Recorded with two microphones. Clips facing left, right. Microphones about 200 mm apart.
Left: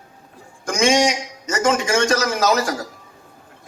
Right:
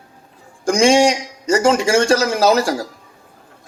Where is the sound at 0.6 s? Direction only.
30° right (ahead or behind).